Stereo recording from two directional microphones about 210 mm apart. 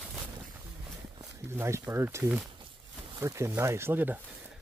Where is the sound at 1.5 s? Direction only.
10° right (ahead or behind).